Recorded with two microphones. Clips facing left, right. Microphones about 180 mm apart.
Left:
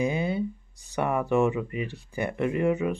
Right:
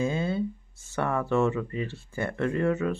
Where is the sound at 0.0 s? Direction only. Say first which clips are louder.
Left 1 dB; 15° left (ahead or behind).